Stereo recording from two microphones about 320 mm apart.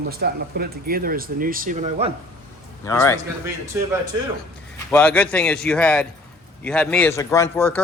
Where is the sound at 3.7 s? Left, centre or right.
Centre.